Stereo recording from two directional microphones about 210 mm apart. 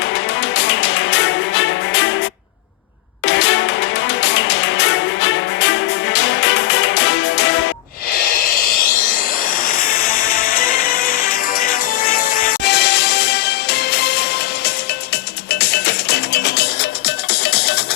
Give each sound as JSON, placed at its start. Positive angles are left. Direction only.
{"t": 0.5, "sound": "music", "side_deg": 55}
{"t": 3.2, "sound": "music", "side_deg": 55}
{"t": 8.1, "sound": "a sound", "side_deg": 40}
{"t": 9.6, "sound": "music", "side_deg": 45}
{"t": 15.4, "sound": "music", "side_deg": 50}